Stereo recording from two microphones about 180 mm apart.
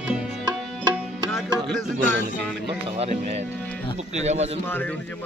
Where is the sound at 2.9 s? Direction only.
35° right (ahead or behind).